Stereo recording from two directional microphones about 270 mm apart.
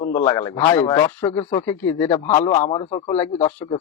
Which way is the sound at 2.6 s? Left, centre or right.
Left.